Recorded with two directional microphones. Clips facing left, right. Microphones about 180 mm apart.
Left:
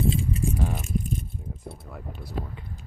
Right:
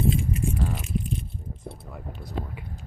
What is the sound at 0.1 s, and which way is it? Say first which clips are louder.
Keys jangling: right 1 dB; 30° left (ahead or behind).